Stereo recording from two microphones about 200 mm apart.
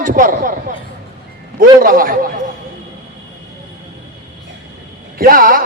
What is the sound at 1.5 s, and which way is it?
Speech, 45° right (ahead or behind).